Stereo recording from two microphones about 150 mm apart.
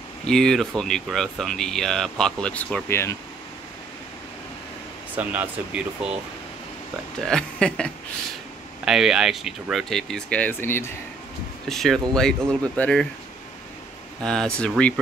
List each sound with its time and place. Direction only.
0.3 s speech: 5° left (ahead or behind)
5.1 s speech: 10° right (ahead or behind)
7.2 s speech: 5° left (ahead or behind)
11.7 s speech: centre (ahead or behind)
14.2 s speech: 5° left (ahead or behind)